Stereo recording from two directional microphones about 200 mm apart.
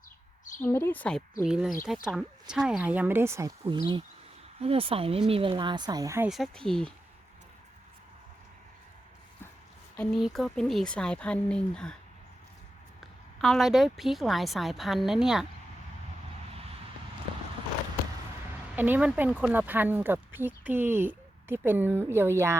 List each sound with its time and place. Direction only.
0.6 s speech: 10° left (ahead or behind)
1.5 s a woman's voice: 5° right (ahead or behind)
6.2 s a woman's voice: centre (ahead or behind)
9.9 s a woman's voice: 5° left (ahead or behind)
13.0 s a woman's voice: centre (ahead or behind)
18.8 s speech: 10° right (ahead or behind)